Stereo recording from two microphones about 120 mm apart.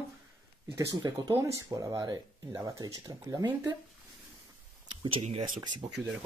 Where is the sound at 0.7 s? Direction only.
25° right (ahead or behind).